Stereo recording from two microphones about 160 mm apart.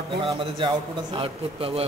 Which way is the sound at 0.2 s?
35° right (ahead or behind).